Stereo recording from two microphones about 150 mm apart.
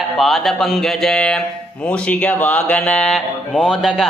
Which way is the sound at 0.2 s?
Centre (ahead or behind).